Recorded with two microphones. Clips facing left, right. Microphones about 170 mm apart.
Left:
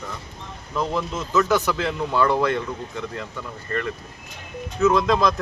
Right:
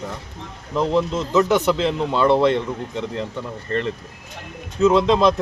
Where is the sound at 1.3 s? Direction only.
15° right (ahead or behind).